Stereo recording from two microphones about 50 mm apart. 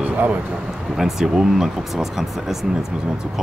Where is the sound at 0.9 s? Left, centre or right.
Centre.